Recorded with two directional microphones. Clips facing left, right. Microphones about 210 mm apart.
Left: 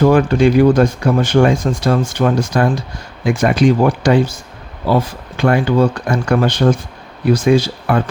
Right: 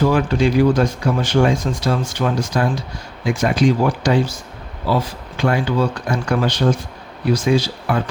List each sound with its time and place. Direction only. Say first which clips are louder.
0.0 s speech: left 5 dB; 50° left (ahead or behind)